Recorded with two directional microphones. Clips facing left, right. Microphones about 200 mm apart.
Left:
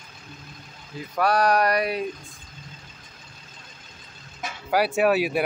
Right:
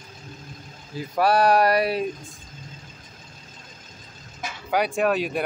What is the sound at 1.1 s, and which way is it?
Speech, 25° right (ahead or behind).